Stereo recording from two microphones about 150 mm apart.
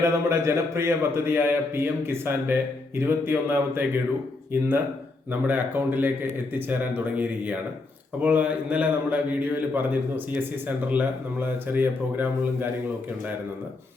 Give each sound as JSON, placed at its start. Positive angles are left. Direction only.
{"t": 0.0, "sound": "a man's voice", "side_deg": -20}
{"t": 5.3, "sound": "a man's voice", "side_deg": -10}